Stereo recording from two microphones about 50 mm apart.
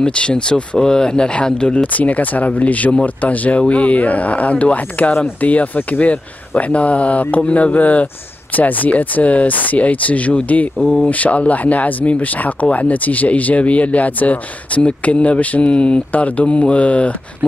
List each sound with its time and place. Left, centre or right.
0.0 s speech: left
1.8 s speech: left
10.8 s speech: centre
11.1 s speech: left